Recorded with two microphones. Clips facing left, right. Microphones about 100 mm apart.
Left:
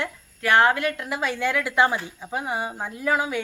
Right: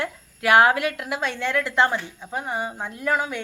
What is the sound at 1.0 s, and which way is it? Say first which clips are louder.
A woman's voice: left 1 dB; centre (ahead or behind).